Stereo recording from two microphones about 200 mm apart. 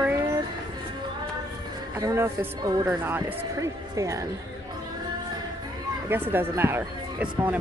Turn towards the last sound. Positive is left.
turn(degrees=-10)  # may be behind; listen again after turning